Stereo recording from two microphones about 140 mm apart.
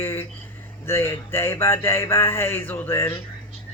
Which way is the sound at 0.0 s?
15° left (ahead or behind).